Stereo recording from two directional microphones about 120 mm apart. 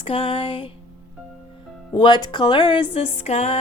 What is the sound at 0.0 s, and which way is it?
Speech, 50° left (ahead or behind).